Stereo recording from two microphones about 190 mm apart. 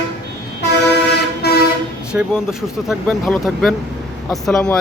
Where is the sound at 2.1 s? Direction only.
5° right (ahead or behind).